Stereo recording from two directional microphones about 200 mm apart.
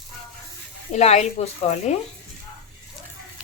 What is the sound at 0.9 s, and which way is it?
A woman's voice, 35° left (ahead or behind).